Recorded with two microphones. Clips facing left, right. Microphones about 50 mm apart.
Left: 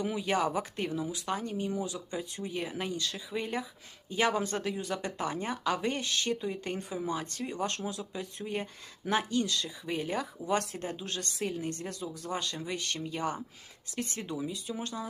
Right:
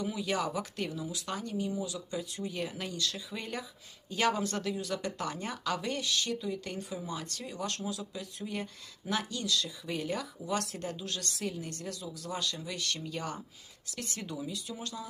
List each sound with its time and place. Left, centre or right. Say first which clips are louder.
0.0 s speech: left 3 dB; left